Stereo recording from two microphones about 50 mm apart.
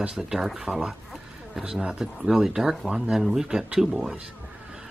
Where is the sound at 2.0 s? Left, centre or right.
Centre.